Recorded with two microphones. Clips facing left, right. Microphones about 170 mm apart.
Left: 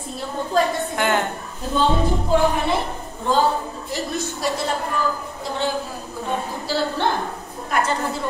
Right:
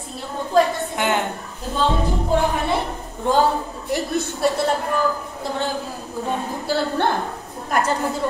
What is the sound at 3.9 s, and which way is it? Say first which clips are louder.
Speech: right 4 dB; 60° right (ahead or behind).